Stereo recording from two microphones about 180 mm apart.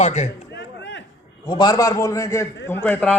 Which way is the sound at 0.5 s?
80° left.